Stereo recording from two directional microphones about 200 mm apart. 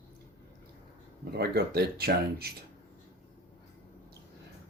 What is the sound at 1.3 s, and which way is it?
Speech, 50° right (ahead or behind).